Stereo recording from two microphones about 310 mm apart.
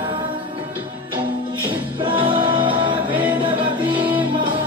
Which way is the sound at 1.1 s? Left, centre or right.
Centre.